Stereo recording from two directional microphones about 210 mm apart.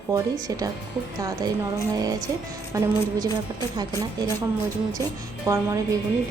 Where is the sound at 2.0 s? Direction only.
15° right (ahead or behind).